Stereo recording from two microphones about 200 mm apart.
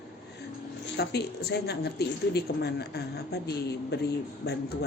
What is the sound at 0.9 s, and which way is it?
A woman's voice, 55° left (ahead or behind).